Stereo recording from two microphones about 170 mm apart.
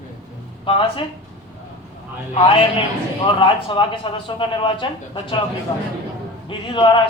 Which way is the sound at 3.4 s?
30° left (ahead or behind).